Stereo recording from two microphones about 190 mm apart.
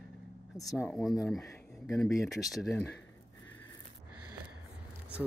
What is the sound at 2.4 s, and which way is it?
Speech, centre (ahead or behind).